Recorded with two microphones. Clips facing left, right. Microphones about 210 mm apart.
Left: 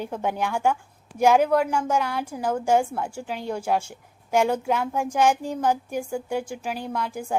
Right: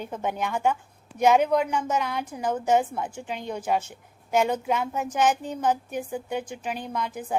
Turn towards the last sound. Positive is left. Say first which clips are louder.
# left 2 dB
turn(degrees=10)  # may be behind; listen again after turning